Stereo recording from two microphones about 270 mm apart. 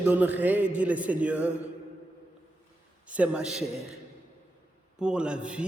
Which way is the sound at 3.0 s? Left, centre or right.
Centre.